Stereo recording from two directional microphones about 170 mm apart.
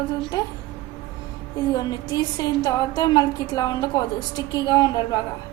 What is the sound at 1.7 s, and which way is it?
A woman's voice, 25° left (ahead or behind).